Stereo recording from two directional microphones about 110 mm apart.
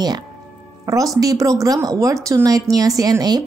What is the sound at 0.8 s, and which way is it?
Speech, 30° right (ahead or behind).